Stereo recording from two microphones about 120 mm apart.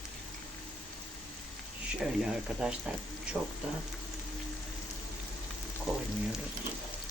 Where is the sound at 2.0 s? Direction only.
5° right (ahead or behind).